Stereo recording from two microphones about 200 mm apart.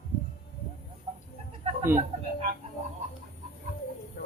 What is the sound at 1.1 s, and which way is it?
Chicken, 30° right (ahead or behind).